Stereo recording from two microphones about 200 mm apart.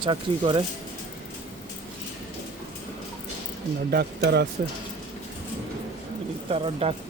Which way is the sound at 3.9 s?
55° right (ahead or behind).